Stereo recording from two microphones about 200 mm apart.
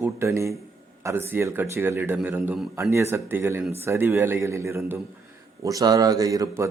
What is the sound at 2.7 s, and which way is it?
Speech, 15° right (ahead or behind).